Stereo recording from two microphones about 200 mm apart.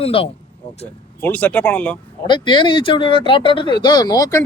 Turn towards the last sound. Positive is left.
turn(degrees=20)  # may be behind; listen again after turning